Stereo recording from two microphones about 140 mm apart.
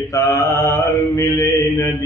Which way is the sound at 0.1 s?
20° left (ahead or behind).